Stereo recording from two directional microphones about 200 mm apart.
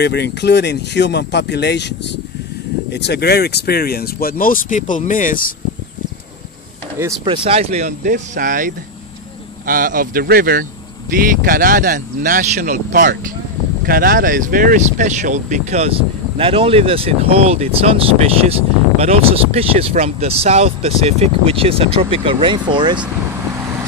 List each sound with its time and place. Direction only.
0.0 s speech: 55° left (ahead or behind)
7.2 s speech: 25° right (ahead or behind)